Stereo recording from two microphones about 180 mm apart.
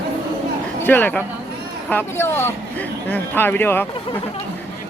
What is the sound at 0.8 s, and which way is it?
Speech, 10° left (ahead or behind).